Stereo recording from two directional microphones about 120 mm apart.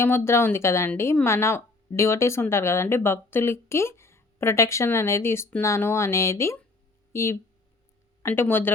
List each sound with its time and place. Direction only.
0.0 s speech: 20° left (ahead or behind)